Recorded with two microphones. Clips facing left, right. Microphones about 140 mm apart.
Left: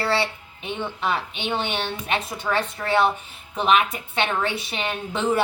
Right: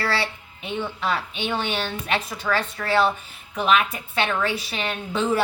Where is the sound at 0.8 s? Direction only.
20° left (ahead or behind).